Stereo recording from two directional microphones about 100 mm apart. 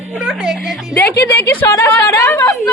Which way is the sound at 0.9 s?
30° left (ahead or behind).